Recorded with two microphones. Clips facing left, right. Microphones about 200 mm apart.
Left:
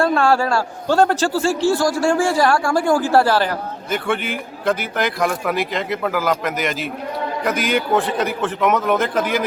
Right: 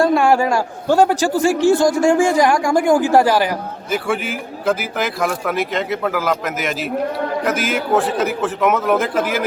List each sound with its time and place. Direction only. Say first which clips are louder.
0.0 s a man's voice: right 2 dB; 15° right (ahead or behind)